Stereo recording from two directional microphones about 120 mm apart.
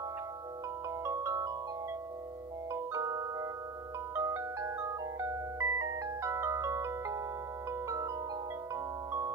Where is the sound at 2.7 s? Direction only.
25° right (ahead or behind).